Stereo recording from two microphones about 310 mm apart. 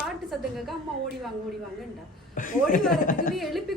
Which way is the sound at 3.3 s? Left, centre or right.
Centre.